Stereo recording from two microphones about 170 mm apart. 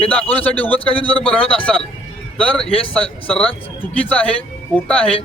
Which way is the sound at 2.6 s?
35° left (ahead or behind).